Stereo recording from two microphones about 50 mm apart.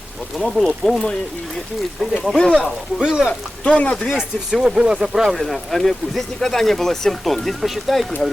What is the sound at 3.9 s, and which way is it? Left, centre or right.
Speech, centre.